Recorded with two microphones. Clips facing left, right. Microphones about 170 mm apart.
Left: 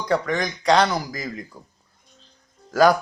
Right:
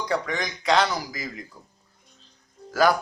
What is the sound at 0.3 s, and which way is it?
A man's voice, 45° left (ahead or behind).